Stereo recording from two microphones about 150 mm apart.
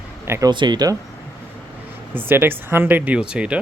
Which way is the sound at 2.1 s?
15° right (ahead or behind).